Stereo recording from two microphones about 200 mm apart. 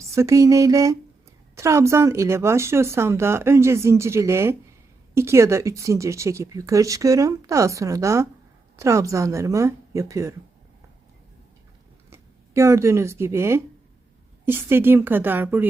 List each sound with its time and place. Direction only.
0.0 s speech: 15° right (ahead or behind)
12.1 s speech: 15° right (ahead or behind)